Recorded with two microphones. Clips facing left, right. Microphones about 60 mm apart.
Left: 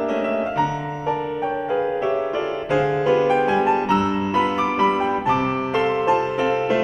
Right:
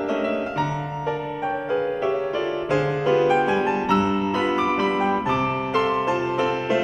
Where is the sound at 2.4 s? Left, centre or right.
Centre.